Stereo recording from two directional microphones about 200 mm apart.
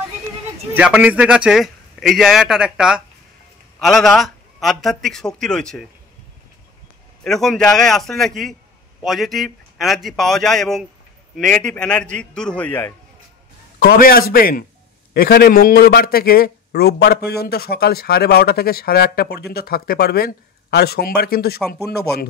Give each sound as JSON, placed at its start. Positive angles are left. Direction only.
{"t": 0.7, "sound": "a man's voice", "side_deg": -5}
{"t": 7.2, "sound": "a man's voice", "side_deg": 0}
{"t": 13.7, "sound": "a man's voice", "side_deg": 50}